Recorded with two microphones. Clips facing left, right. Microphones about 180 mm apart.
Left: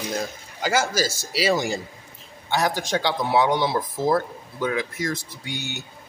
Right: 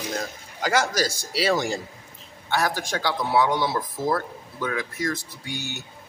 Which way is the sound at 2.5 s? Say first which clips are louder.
Left 2 dB; 20° left (ahead or behind).